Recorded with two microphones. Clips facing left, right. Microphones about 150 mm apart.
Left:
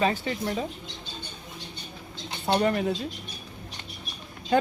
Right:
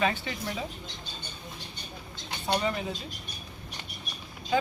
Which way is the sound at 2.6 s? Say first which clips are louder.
Left 9 dB; 55° left (ahead or behind).